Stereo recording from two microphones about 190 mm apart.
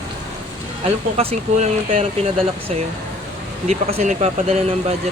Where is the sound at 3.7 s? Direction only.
35° right (ahead or behind).